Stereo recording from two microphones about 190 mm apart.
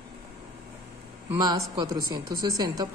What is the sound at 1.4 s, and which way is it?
A woman's voice, 20° right (ahead or behind).